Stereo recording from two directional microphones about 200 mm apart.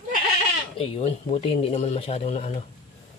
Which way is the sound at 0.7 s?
30° left (ahead or behind).